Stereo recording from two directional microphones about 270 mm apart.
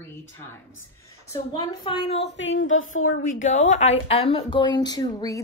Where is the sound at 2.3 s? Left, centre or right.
Left.